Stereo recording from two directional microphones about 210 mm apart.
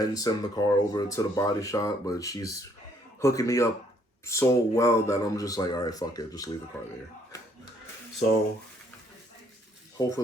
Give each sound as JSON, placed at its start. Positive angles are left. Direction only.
{"t": 0.0, "sound": "speech", "side_deg": 15}